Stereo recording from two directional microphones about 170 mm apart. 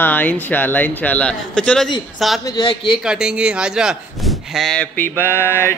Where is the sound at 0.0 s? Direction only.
10° left (ahead or behind).